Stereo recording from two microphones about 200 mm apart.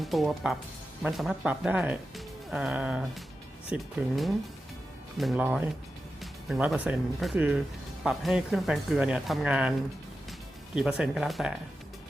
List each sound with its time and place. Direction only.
0.0 s speech: centre (ahead or behind)
10.8 s speech: 5° right (ahead or behind)